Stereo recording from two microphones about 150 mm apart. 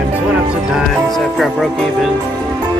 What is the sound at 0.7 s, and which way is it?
Music, centre (ahead or behind).